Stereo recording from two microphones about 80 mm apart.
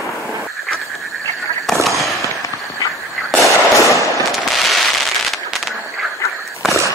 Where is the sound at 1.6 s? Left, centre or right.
Centre.